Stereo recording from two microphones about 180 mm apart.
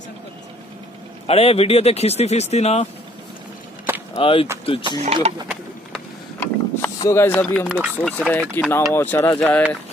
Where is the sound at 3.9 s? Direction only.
10° right (ahead or behind).